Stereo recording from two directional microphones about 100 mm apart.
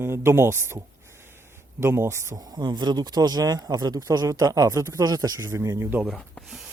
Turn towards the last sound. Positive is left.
turn(degrees=0)  # may be behind; listen again after turning